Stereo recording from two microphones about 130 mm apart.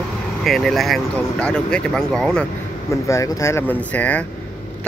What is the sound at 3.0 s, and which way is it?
Speech, 25° left (ahead or behind).